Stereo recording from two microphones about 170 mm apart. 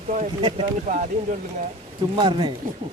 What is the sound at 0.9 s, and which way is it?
Speech, 45° right (ahead or behind).